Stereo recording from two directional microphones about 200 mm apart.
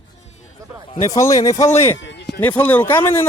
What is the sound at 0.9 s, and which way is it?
Speech, 15° left (ahead or behind).